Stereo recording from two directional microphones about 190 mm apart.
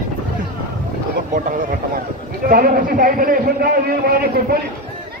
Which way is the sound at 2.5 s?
50° right (ahead or behind).